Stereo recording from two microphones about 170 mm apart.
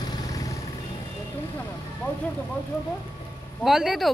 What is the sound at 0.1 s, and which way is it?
Vehicle, 20° left (ahead or behind).